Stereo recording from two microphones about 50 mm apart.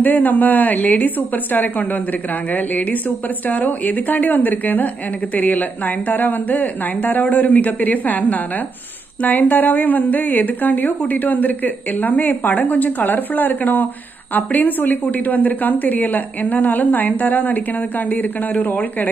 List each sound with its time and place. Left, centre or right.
0.0 s a woman's voice: left